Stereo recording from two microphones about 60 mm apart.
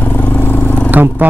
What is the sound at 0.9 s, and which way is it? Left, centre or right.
Speech, right.